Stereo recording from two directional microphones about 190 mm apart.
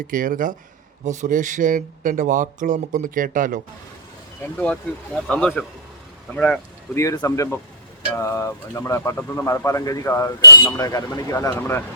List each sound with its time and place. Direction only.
0.1 s speech: 45° right (ahead or behind)
4.9 s speech: 5° left (ahead or behind)